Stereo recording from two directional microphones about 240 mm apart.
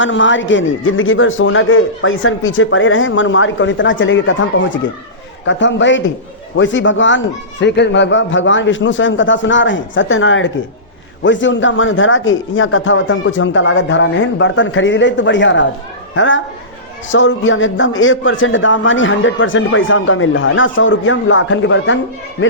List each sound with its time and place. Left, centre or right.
0.0 s a man's voice: left